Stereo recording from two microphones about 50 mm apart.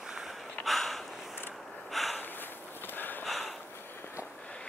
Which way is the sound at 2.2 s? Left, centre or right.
Left.